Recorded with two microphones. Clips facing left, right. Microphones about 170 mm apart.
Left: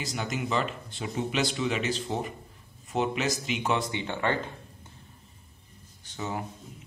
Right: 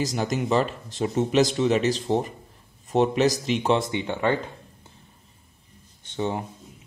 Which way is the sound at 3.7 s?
20° right (ahead or behind).